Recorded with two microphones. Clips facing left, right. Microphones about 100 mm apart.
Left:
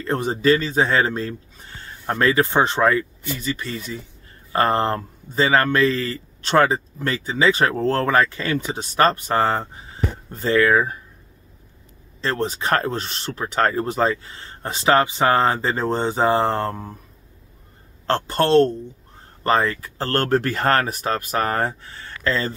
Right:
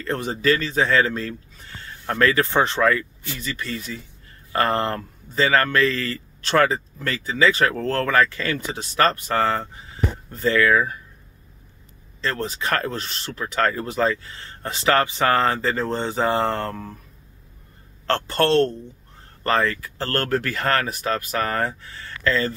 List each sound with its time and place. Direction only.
0.0 s speech: 25° left (ahead or behind)
12.2 s speech: 25° left (ahead or behind)
18.0 s a man's voice: 20° left (ahead or behind)